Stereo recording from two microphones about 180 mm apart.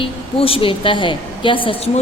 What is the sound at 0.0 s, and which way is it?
A woman's voice, 30° left (ahead or behind).